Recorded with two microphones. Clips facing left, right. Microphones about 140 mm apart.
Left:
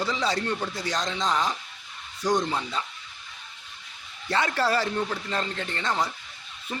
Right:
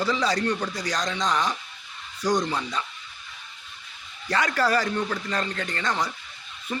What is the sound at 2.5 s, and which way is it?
Speech, 25° left (ahead or behind).